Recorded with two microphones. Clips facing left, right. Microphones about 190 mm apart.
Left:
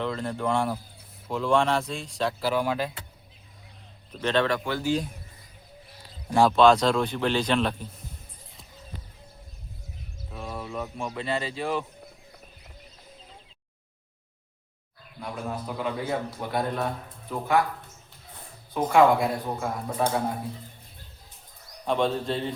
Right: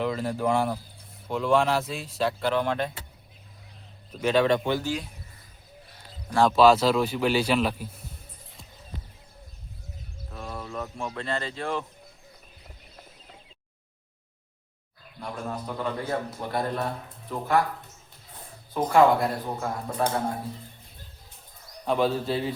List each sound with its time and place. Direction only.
0.0 s a man's voice: 5° right (ahead or behind)
4.1 s speech: 10° right (ahead or behind)
4.4 s speech: 20° right (ahead or behind)
6.6 s a man's voice: 5° right (ahead or behind)
10.3 s speech: 5° left (ahead or behind)
15.2 s a man's voice: 5° left (ahead or behind)
18.7 s a man's voice: centre (ahead or behind)
21.8 s a man's voice: 5° right (ahead or behind)